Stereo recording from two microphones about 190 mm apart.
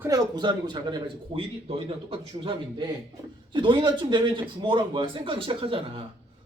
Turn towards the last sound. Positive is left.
turn(degrees=-30)  # may be behind; listen again after turning